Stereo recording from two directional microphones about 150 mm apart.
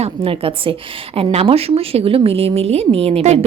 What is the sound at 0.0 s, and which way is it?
A woman's voice, 40° right (ahead or behind).